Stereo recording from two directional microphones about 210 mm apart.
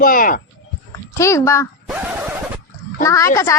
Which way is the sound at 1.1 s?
15° left (ahead or behind).